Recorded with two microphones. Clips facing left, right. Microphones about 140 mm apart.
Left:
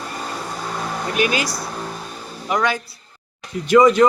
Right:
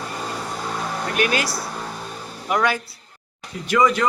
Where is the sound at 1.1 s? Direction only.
5° left (ahead or behind).